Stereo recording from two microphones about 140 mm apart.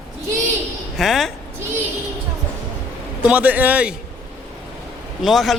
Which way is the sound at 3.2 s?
10° right (ahead or behind).